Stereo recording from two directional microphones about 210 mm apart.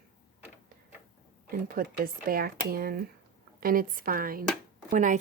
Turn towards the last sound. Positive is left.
turn(degrees=-35)  # may be behind; listen again after turning